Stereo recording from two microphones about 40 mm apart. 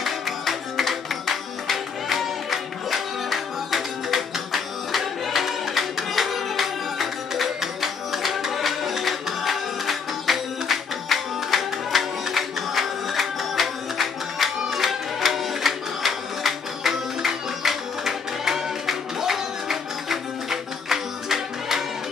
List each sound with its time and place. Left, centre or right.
0.0 s music: centre